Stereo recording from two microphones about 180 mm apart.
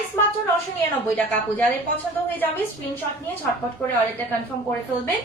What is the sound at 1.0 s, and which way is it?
Speech, 10° left (ahead or behind).